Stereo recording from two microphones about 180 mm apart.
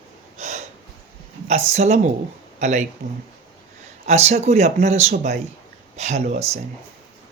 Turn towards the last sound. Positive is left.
turn(degrees=-35)  # may be behind; listen again after turning